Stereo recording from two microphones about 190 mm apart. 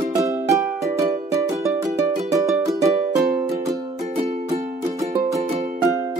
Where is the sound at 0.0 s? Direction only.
15° right (ahead or behind).